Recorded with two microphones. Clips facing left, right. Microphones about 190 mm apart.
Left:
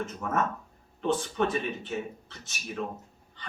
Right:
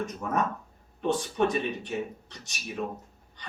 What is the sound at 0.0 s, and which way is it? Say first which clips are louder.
Speech: right 1 dB; 15° right (ahead or behind).